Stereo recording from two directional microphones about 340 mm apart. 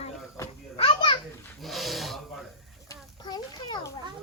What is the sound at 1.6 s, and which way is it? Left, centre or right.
Dog, centre.